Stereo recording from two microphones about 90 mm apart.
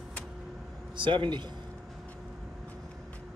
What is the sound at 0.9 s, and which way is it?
Speech, 65° right (ahead or behind).